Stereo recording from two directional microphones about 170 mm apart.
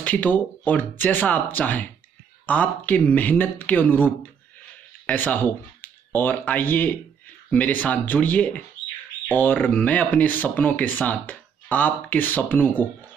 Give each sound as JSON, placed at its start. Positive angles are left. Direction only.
{"t": 0.0, "sound": "speech", "side_deg": 10}